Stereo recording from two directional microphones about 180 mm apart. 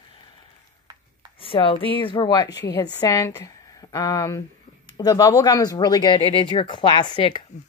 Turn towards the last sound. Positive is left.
turn(degrees=25)  # may be behind; listen again after turning